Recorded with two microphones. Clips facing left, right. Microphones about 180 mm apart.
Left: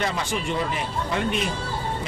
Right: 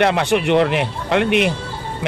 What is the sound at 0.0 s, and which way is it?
Speech, 70° right (ahead or behind).